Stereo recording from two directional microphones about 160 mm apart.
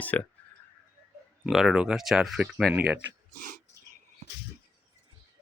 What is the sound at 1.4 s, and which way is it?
Speech, centre (ahead or behind).